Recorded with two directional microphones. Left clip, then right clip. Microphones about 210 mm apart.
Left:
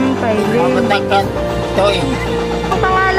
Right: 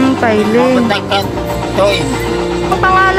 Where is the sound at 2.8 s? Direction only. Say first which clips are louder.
Right 5 dB; 5° right (ahead or behind).